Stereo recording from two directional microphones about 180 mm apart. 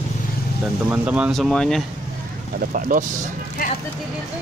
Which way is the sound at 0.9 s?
5° right (ahead or behind).